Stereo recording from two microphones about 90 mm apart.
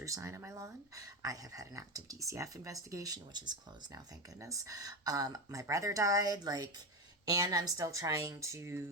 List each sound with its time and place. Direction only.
0.0 s speech: 35° right (ahead or behind); by 3.6 s 55° right (ahead or behind)
3.9 s speech: 40° right (ahead or behind)